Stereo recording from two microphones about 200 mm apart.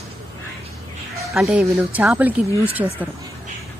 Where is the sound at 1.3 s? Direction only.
5° right (ahead or behind).